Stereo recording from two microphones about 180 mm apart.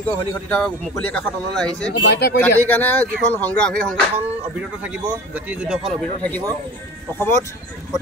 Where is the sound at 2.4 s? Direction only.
10° left (ahead or behind).